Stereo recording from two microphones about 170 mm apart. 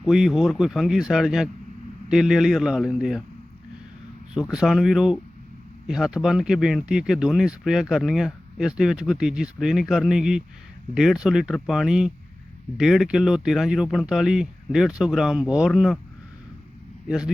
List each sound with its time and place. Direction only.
0.0 s speech: centre (ahead or behind)
4.5 s speech: centre (ahead or behind)